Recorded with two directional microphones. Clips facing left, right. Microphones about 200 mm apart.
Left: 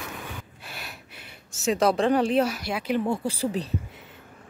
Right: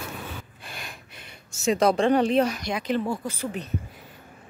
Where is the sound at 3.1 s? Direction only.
30° left (ahead or behind).